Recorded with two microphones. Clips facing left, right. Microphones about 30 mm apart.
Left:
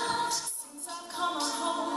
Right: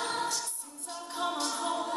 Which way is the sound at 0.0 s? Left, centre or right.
Centre.